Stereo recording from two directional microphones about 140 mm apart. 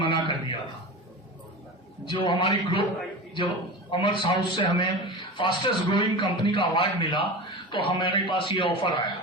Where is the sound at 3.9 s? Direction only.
35° left (ahead or behind).